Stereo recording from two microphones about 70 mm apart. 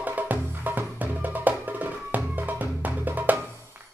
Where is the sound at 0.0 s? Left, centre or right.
Right.